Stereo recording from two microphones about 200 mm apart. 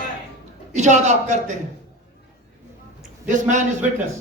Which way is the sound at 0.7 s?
35° right (ahead or behind).